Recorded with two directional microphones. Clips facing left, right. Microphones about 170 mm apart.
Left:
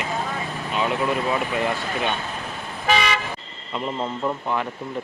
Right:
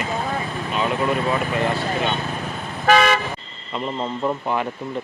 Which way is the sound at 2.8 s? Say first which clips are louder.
Right 5 dB; 50° right (ahead or behind).